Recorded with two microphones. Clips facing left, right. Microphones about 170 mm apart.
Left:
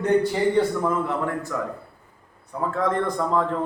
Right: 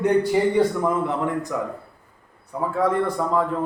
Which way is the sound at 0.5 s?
15° right (ahead or behind).